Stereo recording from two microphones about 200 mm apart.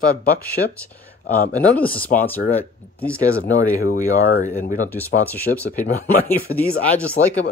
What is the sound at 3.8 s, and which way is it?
Speech, 40° left (ahead or behind).